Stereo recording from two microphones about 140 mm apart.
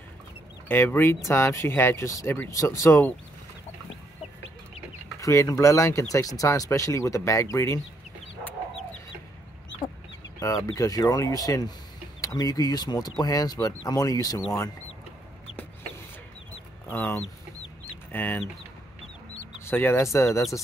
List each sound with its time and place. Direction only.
0.7 s speech: 15° left (ahead or behind)
5.2 s speech: 25° left (ahead or behind)
10.4 s speech: 25° left (ahead or behind)
16.9 s speech: 15° left (ahead or behind)
19.6 s speech: 15° left (ahead or behind)